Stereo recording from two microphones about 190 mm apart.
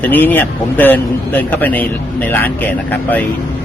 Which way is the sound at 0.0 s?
10° left (ahead or behind).